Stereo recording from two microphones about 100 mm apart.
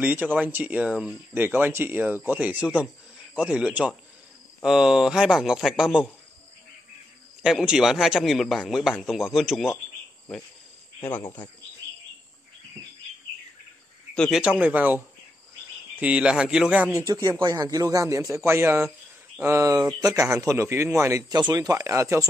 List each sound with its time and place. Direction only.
0.0 s a man's voice: 15° right (ahead or behind)
7.4 s a man's voice: 5° right (ahead or behind)
11.0 s speech: 20° left (ahead or behind)
14.3 s speech: 10° right (ahead or behind)
16.0 s speech: 10° right (ahead or behind)
16.9 s a man's voice: 40° right (ahead or behind)
21.3 s a man's voice: 40° right (ahead or behind)